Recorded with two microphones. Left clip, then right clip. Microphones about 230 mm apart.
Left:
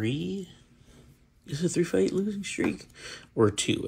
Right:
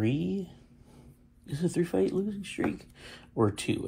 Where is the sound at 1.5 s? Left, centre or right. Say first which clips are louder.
Left 3 dB; centre.